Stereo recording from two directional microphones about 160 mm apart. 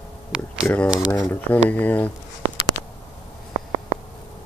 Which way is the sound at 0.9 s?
25° left (ahead or behind).